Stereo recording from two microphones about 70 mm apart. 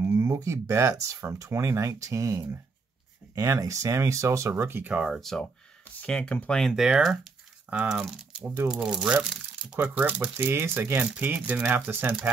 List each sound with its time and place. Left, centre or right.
0.0 s speech: right
4.6 s speech: right
5.0 s speech: centre
6.0 s speech: centre
6.6 s speech: centre
8.3 s crumpling: centre
8.6 s speech: centre
9.9 s speech: right